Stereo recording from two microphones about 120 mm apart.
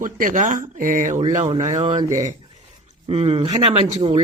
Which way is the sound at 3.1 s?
55° right (ahead or behind).